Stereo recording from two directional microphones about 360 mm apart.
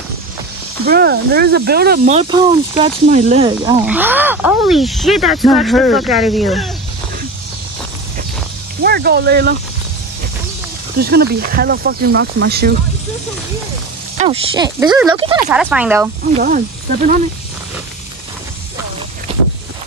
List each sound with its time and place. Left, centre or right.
0.8 s speech: right
3.8 s speech: centre
8.8 s speech: right
11.0 s speech: right
14.1 s speech: centre
15.5 s speech: centre
16.3 s speech: right
19.3 s boat: centre